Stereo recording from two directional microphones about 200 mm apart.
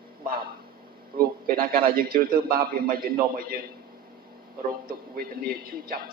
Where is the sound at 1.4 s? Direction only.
45° right (ahead or behind).